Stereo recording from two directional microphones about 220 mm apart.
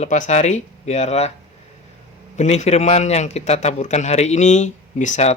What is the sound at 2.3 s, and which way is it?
Speech, 30° left (ahead or behind).